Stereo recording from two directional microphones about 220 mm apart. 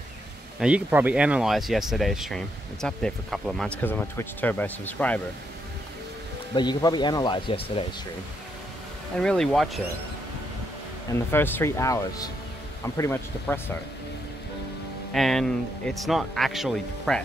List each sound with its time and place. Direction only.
0.6 s speech: 5° right (ahead or behind)
6.5 s speech: 20° left (ahead or behind)
9.2 s speech: 5° left (ahead or behind)
11.3 s speech: 10° left (ahead or behind)
15.1 s speech: centre (ahead or behind)